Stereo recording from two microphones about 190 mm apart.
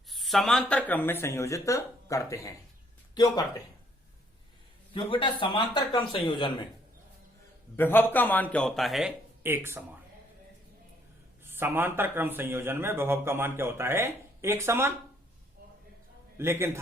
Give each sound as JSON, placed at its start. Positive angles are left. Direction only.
{"t": 0.1, "sound": "speech", "side_deg": 0}
{"t": 4.9, "sound": "speech", "side_deg": 25}
{"t": 7.8, "sound": "a man's voice", "side_deg": 10}
{"t": 11.4, "sound": "speech", "side_deg": -10}
{"t": 16.4, "sound": "speech", "side_deg": -15}